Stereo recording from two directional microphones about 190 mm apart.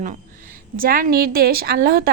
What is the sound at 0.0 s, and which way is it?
A woman's voice, 45° right (ahead or behind).